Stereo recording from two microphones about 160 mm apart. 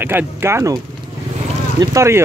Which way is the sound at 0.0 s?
15° right (ahead or behind).